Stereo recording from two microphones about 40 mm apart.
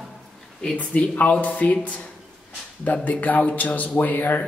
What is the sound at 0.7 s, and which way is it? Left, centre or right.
Speech, left.